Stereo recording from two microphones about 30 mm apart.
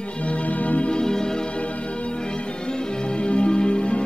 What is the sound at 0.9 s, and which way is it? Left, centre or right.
Music, left.